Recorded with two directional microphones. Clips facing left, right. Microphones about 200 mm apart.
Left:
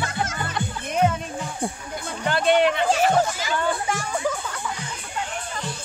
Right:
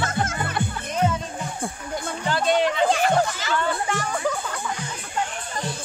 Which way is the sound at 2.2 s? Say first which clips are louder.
Left 3 dB; 60° left (ahead or behind).